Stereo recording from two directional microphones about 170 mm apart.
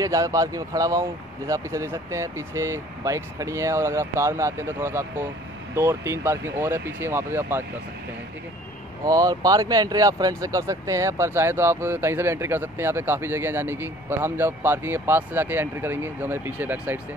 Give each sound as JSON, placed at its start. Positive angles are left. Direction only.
{"t": 0.0, "sound": "speech", "side_deg": -20}
{"t": 9.0, "sound": "speech", "side_deg": -20}